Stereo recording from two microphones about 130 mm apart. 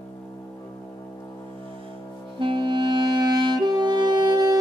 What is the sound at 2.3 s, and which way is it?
Music, 40° right (ahead or behind).